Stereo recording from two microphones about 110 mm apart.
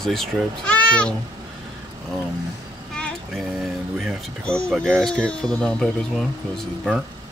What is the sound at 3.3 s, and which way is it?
Music, centre (ahead or behind).